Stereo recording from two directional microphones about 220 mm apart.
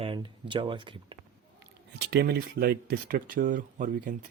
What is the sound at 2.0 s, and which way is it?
Speech, 50° right (ahead or behind).